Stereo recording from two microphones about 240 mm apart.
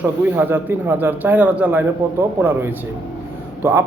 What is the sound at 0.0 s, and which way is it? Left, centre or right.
A man's voice, centre.